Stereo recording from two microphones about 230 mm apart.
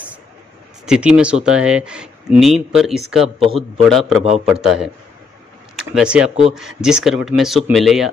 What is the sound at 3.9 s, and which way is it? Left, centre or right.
Speech, centre.